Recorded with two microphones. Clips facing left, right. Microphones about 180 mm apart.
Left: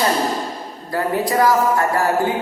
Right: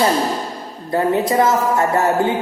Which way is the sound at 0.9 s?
25° right (ahead or behind).